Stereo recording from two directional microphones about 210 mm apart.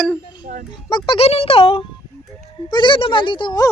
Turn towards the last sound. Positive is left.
turn(degrees=20)  # may be behind; listen again after turning